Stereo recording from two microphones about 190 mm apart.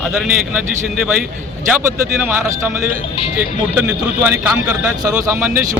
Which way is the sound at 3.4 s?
5° right (ahead or behind).